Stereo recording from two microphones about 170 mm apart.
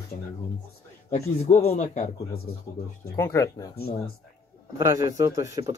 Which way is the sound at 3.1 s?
15° left (ahead or behind).